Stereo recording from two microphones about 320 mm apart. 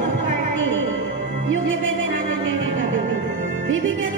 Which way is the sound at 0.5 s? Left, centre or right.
Right.